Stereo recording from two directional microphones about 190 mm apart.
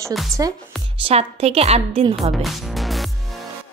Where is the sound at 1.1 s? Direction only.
30° right (ahead or behind).